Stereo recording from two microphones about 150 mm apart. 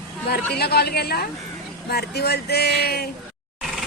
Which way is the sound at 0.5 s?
90° left.